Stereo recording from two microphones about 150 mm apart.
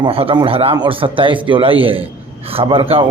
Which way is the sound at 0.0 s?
35° right (ahead or behind).